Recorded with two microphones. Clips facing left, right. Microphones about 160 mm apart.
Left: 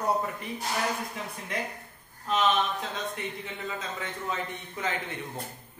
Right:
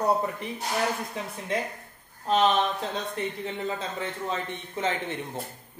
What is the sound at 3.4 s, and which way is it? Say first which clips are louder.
Speech: right 5 dB; 30° right (ahead or behind).